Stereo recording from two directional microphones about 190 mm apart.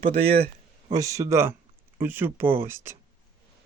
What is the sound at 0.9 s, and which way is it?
Speech, 15° right (ahead or behind).